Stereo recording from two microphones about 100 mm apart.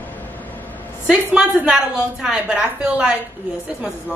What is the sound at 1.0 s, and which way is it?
A woman's voice, 5° right (ahead or behind).